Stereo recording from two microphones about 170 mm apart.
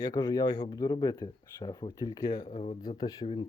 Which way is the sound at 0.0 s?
20° left (ahead or behind).